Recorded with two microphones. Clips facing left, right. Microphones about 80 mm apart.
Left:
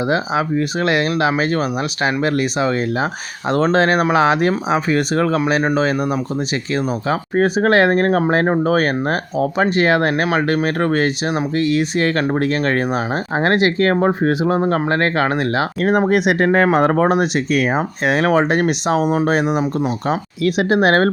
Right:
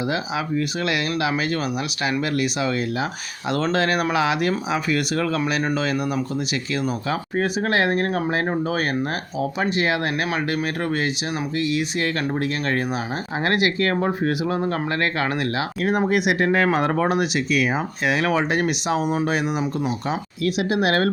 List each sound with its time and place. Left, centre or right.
0.1 s speech: left
7.6 s speech: left
15.8 s speech: left